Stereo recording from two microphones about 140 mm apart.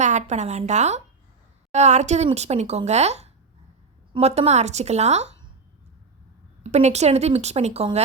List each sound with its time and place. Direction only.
0.0 s a woman's voice: 55° right (ahead or behind)
6.6 s speech: 50° right (ahead or behind)